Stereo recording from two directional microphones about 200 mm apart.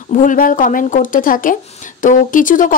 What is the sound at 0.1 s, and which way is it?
Speech, 40° left (ahead or behind).